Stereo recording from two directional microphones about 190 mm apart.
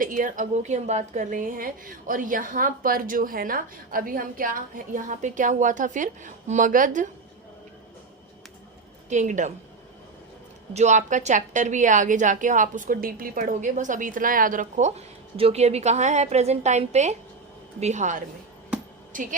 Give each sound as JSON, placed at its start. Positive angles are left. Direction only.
{"t": 0.0, "sound": "a woman's voice", "side_deg": -45}
{"t": 9.0, "sound": "a woman's voice", "side_deg": -40}
{"t": 10.8, "sound": "a woman's voice", "side_deg": -40}